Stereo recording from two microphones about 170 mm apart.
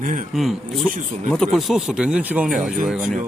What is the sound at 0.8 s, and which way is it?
Speech, 50° right (ahead or behind).